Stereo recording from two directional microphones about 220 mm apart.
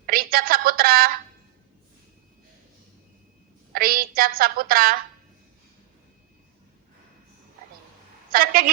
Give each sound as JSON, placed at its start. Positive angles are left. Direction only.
{"t": 0.0, "sound": "telephone", "side_deg": -40}
{"t": 3.7, "sound": "a woman's voice", "side_deg": -40}
{"t": 8.3, "sound": "a woman's voice", "side_deg": -40}